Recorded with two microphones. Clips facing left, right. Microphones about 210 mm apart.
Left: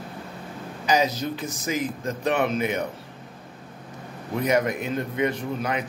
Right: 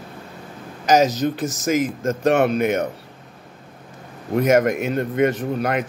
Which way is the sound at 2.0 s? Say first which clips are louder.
Right 6 dB; 45° right (ahead or behind).